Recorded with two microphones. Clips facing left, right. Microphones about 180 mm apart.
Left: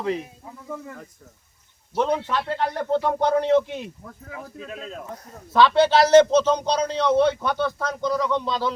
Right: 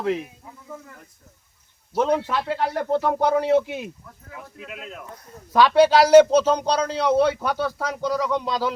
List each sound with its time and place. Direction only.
2.0 s a man's voice: 10° right (ahead or behind)
4.5 s speech: 35° left (ahead or behind)
5.5 s a man's voice: 10° right (ahead or behind)